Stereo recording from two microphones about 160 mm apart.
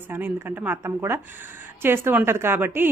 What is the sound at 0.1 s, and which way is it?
Speech, 15° right (ahead or behind).